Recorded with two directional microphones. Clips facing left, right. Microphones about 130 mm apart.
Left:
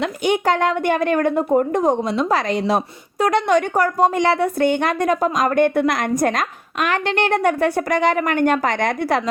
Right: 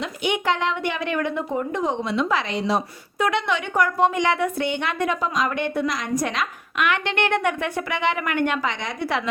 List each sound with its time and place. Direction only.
0.3 s a woman's voice: 45° left (ahead or behind)